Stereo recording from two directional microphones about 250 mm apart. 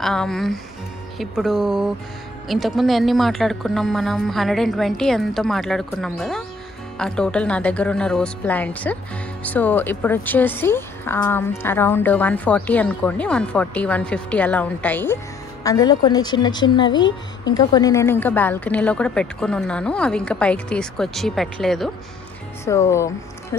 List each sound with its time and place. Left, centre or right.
0.0 s speech: centre